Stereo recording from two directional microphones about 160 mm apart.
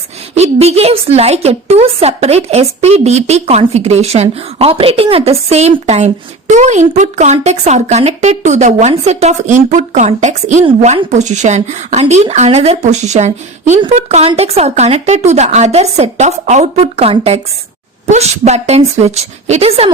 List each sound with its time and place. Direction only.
0.3 s a woman's voice: 40° right (ahead or behind)